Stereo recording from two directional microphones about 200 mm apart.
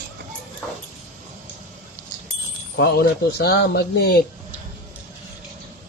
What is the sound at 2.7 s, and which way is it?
Speech, 50° left (ahead or behind).